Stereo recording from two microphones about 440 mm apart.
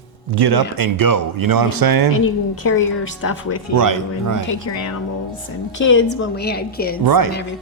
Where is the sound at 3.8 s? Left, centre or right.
Right.